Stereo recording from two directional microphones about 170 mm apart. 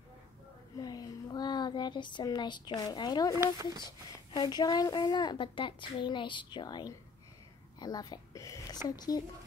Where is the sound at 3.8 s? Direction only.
25° left (ahead or behind).